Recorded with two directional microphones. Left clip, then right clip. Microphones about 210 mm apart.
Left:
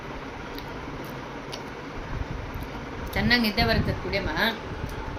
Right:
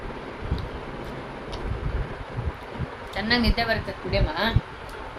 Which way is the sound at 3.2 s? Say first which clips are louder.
Left 1 dB; 15° right (ahead or behind).